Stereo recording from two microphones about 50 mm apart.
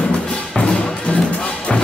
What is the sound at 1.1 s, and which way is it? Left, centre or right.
Music, left.